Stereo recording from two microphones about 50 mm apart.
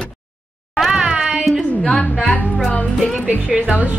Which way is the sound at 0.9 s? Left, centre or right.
Centre.